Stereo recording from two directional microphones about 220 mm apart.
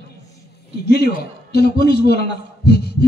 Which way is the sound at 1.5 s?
45° left (ahead or behind).